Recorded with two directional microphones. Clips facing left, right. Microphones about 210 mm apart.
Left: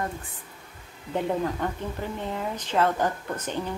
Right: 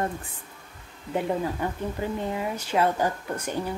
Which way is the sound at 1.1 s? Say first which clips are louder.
Even; 10° right (ahead or behind).